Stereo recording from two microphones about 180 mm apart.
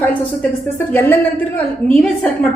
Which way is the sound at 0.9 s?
10° left (ahead or behind).